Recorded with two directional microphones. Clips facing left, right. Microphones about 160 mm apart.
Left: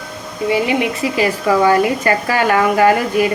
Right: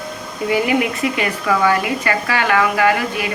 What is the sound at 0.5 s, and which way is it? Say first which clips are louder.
A woman's voice: even; 25° left (ahead or behind).